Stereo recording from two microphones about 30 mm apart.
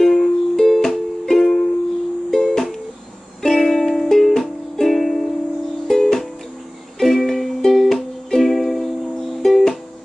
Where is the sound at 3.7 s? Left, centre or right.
Centre.